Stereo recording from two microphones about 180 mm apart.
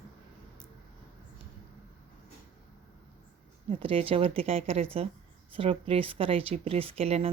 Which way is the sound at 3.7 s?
30° right (ahead or behind).